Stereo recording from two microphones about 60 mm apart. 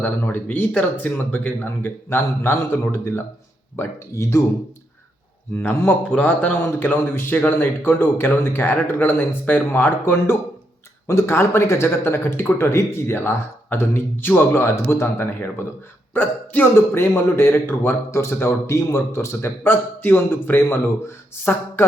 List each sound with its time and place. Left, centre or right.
0.0 s speech: left
5.5 s speech: left
6.1 s speech: left
11.0 s speech: left
16.7 s speech: left